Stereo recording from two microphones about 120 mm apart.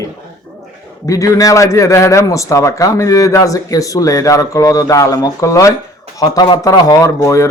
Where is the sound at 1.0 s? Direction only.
30° left (ahead or behind).